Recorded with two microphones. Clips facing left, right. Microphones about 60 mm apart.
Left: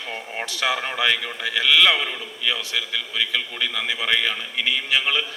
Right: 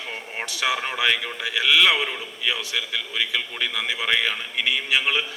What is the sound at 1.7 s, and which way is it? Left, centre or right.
Speech, centre.